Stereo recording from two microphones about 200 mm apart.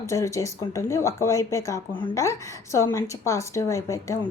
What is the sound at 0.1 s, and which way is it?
A woman's voice, 15° left (ahead or behind).